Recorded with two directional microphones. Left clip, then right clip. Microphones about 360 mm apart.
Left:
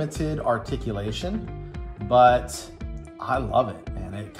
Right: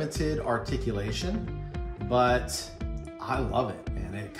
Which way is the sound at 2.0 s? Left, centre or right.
Centre.